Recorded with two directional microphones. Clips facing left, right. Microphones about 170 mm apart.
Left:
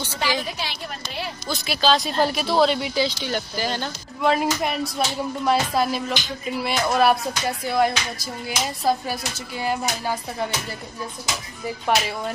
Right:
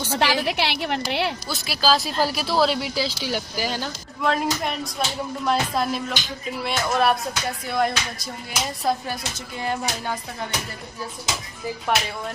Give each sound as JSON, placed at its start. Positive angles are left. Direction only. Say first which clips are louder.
{"t": 0.1, "sound": "a woman's voice", "louder": "right 5 dB", "side_deg": -75}
{"t": 1.5, "sound": "speech", "louder": "left 4 dB", "side_deg": -5}